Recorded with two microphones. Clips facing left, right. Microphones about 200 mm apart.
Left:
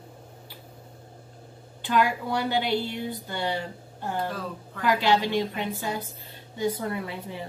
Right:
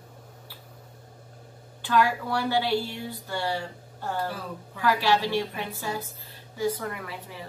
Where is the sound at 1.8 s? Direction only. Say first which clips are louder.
Even; 20° left (ahead or behind).